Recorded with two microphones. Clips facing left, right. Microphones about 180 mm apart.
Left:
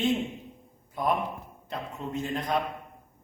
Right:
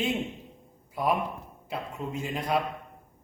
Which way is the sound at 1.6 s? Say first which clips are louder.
Right 1 dB; 5° right (ahead or behind).